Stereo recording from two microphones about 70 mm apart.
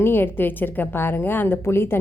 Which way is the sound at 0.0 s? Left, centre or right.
Left.